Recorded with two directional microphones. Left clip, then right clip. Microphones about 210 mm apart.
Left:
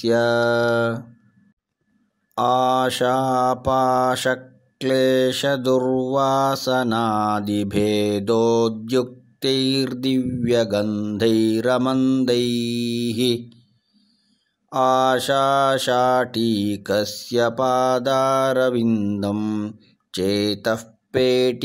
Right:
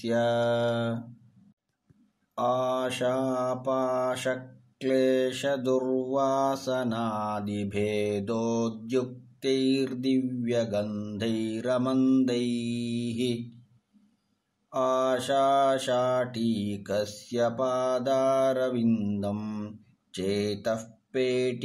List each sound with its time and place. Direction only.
0.0 s mantra: 40° left (ahead or behind)
2.3 s mantra: 45° left (ahead or behind)
14.7 s mantra: 45° left (ahead or behind)